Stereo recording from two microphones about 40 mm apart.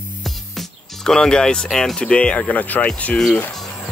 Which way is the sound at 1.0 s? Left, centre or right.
Centre.